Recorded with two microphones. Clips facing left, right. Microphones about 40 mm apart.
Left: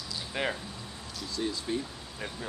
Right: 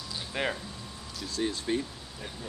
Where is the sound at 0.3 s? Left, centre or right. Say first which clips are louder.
Right 1 dB; centre.